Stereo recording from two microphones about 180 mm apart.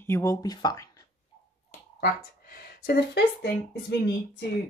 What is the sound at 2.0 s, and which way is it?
Speech, 60° left (ahead or behind).